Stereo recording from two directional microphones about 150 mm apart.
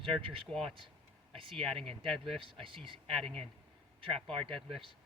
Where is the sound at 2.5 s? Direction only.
35° right (ahead or behind).